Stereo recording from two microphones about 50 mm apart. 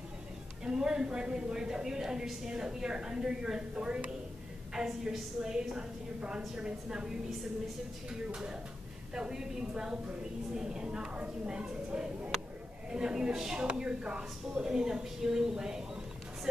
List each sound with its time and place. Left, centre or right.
0.7 s a woman's voice: centre
4.7 s a woman's voice: centre